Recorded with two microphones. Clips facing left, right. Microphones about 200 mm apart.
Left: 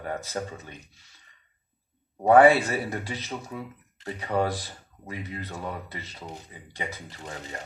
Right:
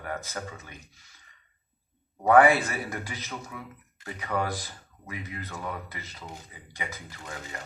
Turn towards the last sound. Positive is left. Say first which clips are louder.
# left 2 dB
turn(degrees=30)  # may be behind; listen again after turning